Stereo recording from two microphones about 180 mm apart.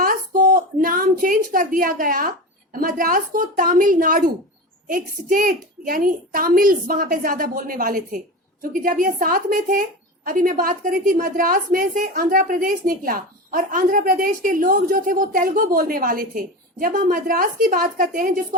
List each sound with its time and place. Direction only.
0.8 s a woman's voice: 55° right (ahead or behind)